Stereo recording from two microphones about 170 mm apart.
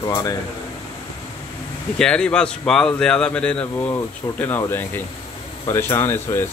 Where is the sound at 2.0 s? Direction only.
5° left (ahead or behind).